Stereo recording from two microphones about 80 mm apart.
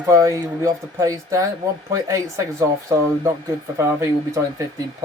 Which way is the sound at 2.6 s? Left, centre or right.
Right.